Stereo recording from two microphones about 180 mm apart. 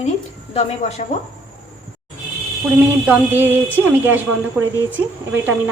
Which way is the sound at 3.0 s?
10° right (ahead or behind).